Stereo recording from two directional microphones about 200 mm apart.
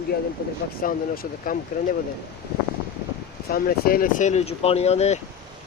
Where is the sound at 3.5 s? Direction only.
50° left (ahead or behind); by 5.2 s 35° left (ahead or behind).